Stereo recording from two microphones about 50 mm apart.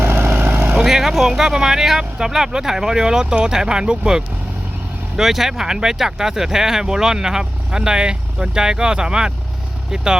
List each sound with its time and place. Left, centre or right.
0.0 s vehicle: right
0.7 s speech: centre
5.1 s speech: centre